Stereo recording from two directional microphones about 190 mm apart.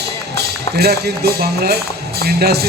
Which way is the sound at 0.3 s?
55° right (ahead or behind).